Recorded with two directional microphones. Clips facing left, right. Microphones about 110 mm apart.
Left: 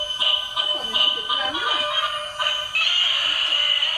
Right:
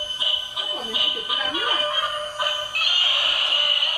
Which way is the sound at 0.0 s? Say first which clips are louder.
Left 3 dB; 65° left (ahead or behind).